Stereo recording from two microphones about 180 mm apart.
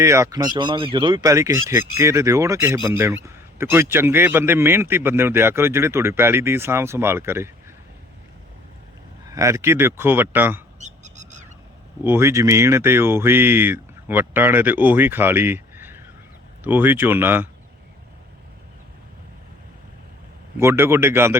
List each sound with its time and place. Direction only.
0.0 s a man's voice: 15° right (ahead or behind)
9.3 s a man's voice: 15° right (ahead or behind)
10.8 s owl: 40° right (ahead or behind)
12.0 s a man's voice: 15° right (ahead or behind)
20.6 s a man's voice: 15° right (ahead or behind)